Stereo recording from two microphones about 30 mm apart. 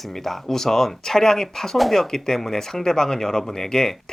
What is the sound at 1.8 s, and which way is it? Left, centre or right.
Speech, centre.